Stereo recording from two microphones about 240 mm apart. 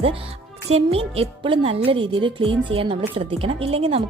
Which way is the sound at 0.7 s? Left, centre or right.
Right.